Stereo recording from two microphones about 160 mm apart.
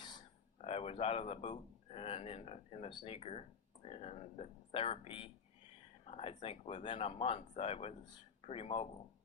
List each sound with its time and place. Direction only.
0.6 s speech: 40° left (ahead or behind)